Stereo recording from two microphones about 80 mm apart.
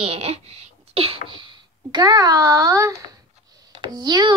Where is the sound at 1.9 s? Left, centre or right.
Right.